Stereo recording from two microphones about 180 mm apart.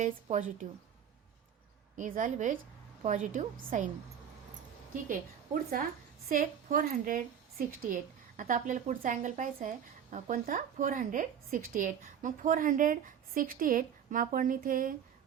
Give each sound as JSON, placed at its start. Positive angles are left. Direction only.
{"t": 0.0, "sound": "a woman's voice", "side_deg": -45}
{"t": 2.0, "sound": "a woman's voice", "side_deg": -45}
{"t": 6.2, "sound": "a woman's voice", "side_deg": -50}